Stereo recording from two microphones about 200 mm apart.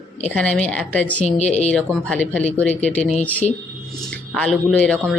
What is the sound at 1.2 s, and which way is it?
Speech, 30° left (ahead or behind).